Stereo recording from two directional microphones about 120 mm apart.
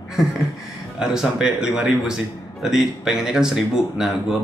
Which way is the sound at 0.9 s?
5° right (ahead or behind).